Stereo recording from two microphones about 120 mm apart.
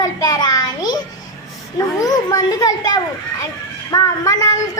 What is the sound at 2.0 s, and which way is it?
A child's voice, 30° left (ahead or behind).